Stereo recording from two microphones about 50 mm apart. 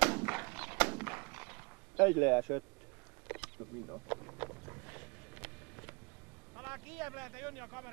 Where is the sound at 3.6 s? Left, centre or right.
Right.